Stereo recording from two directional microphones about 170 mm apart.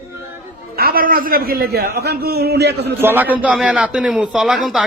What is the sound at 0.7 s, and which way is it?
A man's voice, 60° right (ahead or behind).